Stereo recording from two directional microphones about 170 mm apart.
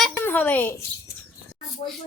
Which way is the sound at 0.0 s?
10° left (ahead or behind).